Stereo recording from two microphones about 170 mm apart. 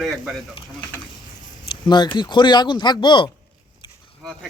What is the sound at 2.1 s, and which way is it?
Speech, 25° left (ahead or behind).